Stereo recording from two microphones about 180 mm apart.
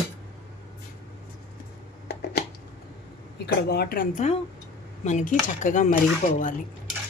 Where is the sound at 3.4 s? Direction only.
60° left (ahead or behind).